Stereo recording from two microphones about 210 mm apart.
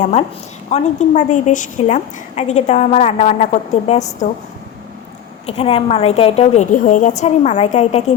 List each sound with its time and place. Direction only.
0.7 s a woman's voice: 30° left (ahead or behind)
5.5 s a woman's voice: 25° left (ahead or behind)